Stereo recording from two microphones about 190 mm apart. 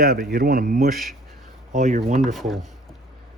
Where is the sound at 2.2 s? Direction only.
Centre (ahead or behind).